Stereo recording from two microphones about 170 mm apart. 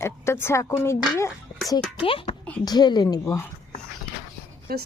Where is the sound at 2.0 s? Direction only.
30° left (ahead or behind).